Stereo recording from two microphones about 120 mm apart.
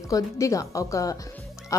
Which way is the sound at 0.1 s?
30° left (ahead or behind).